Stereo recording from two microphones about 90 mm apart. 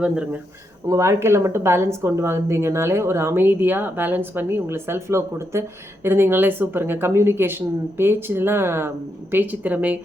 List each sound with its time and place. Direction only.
0.9 s speech: 30° right (ahead or behind); by 10.0 s 15° right (ahead or behind)